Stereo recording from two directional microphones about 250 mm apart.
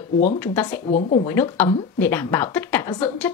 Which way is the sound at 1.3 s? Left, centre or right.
Centre.